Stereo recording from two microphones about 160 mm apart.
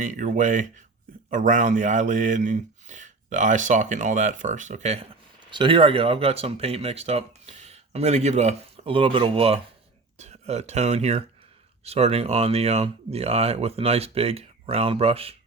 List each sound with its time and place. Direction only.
0.0 s speech: 50° right (ahead or behind)
5.5 s speech: 30° right (ahead or behind)